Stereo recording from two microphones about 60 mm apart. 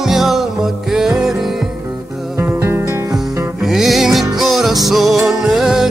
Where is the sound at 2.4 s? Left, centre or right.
Right.